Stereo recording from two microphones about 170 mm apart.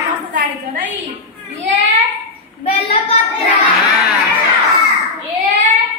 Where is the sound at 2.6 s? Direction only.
35° left (ahead or behind).